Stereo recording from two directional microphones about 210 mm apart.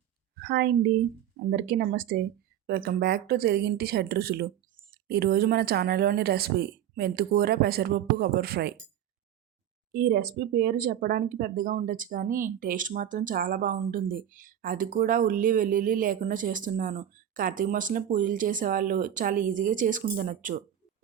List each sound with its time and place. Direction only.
0.3 s speech: 50° right (ahead or behind)
9.9 s speech: 45° right (ahead or behind)